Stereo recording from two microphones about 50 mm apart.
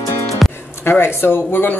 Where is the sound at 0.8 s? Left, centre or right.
Left.